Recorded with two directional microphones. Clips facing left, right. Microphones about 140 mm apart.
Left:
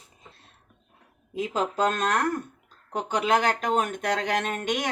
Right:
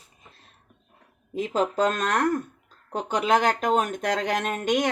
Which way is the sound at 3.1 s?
40° right (ahead or behind).